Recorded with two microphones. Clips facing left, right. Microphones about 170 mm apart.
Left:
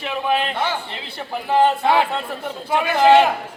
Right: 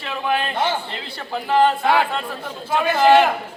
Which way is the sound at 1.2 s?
20° left (ahead or behind).